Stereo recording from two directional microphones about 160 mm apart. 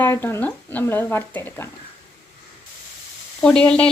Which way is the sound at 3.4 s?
5° left (ahead or behind).